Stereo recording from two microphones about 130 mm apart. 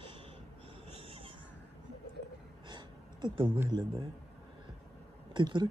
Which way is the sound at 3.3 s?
40° right (ahead or behind).